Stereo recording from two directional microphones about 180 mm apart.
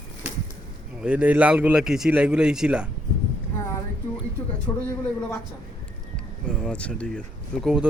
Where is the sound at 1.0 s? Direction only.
5° right (ahead or behind).